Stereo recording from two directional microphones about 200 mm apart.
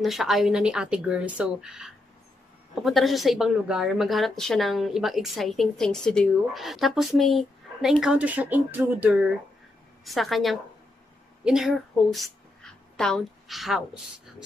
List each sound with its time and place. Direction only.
0.0 s a woman's voice: centre (ahead or behind)